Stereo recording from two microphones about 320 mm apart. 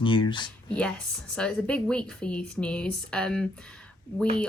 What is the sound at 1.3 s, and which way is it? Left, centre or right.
A woman's voice, centre.